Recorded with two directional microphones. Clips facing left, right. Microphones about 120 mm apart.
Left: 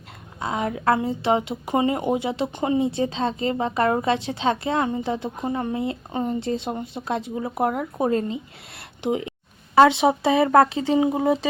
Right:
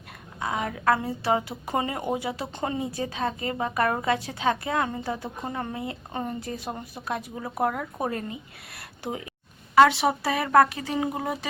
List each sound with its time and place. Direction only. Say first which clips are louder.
0.3 s a woman's voice: left 3 dB; 25° left (ahead or behind)